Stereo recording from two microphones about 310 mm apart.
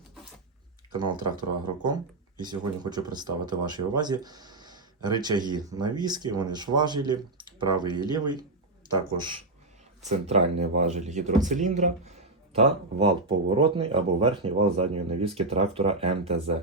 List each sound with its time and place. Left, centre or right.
1.6 s speech: centre